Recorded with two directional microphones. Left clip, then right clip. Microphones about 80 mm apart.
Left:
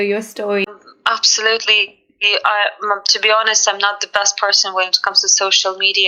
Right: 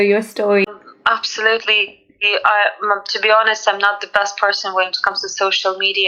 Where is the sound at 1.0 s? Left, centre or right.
Left.